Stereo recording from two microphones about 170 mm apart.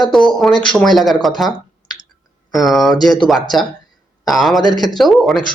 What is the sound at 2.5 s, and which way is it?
Speech, centre (ahead or behind).